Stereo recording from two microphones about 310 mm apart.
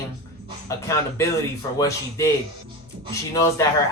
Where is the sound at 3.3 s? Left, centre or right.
Centre.